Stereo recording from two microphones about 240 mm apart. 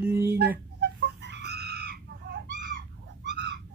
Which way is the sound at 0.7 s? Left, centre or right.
Right.